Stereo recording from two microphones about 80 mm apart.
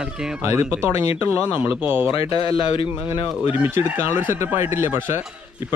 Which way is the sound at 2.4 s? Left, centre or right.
Left.